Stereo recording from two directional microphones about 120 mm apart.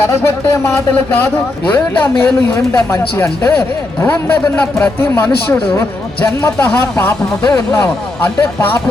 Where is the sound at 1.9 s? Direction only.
15° left (ahead or behind).